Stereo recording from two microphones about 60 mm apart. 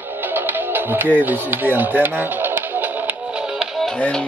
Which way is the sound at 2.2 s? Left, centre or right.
Right.